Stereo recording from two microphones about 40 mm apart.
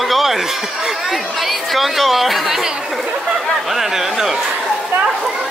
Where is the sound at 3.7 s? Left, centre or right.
Centre.